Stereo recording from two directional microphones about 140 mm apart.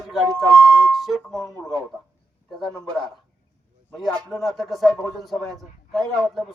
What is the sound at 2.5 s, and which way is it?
Speech, 5° left (ahead or behind).